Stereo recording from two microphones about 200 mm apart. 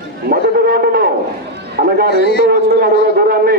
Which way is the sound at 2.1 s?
50° left (ahead or behind).